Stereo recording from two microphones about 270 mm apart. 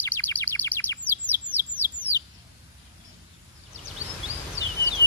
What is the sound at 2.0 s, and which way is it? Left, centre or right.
Chicken, centre.